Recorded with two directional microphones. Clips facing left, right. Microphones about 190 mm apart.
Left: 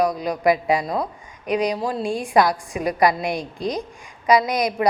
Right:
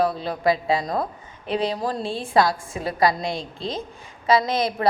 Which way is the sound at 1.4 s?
30° right (ahead or behind).